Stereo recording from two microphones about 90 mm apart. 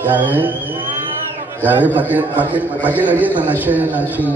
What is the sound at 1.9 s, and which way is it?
A man's voice, 20° right (ahead or behind).